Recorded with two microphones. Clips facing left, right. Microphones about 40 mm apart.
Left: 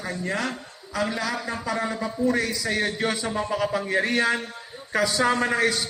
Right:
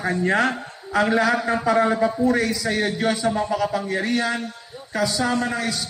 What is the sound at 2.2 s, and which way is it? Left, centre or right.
A man's voice, centre.